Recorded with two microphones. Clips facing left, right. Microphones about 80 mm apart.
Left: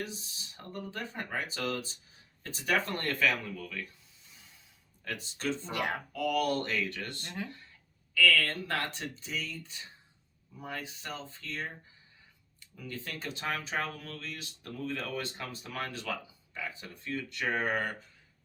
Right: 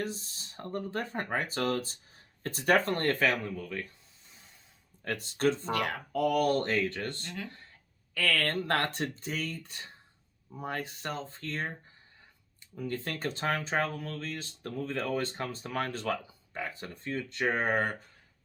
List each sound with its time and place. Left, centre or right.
0.1 s speech: right
5.0 s speech: right
5.7 s speech: left
6.1 s speech: right
8.1 s speech: right
12.7 s speech: right